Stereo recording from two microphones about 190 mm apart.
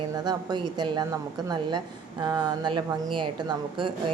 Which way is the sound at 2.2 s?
20° right (ahead or behind).